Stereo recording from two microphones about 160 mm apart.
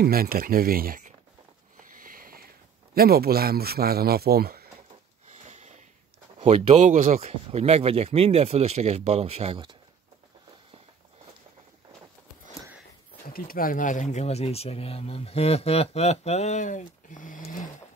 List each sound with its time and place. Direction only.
0.0 s speech: 70° right (ahead or behind)
1.8 s sniff: 60° right (ahead or behind)
2.9 s speech: 75° right (ahead or behind)
5.5 s sniff: 45° right (ahead or behind)
6.4 s speech: 45° right (ahead or behind)
13.3 s speech: 65° left (ahead or behind)